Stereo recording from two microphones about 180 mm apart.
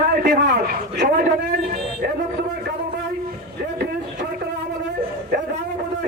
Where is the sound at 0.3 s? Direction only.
60° right (ahead or behind).